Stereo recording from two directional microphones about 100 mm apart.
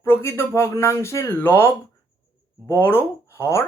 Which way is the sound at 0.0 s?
25° left (ahead or behind).